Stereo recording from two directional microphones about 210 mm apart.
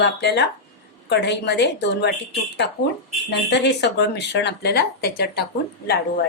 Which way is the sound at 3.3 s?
55° left (ahead or behind).